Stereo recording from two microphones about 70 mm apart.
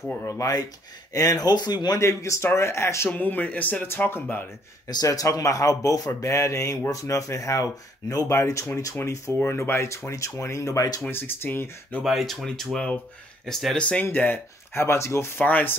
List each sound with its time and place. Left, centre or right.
0.2 s speech: left
1.1 s speech: left
2.0 s speech: left
3.2 s speech: left
5.0 s speech: left
9.4 s speech: left
11.1 s speech: left
12.0 s speech: centre
12.7 s speech: centre
13.5 s speech: centre
13.7 s speech: centre
14.1 s speech: left
15.4 s speech: left